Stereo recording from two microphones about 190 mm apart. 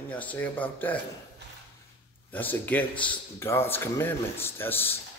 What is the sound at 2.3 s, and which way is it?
A man's voice, 10° left (ahead or behind).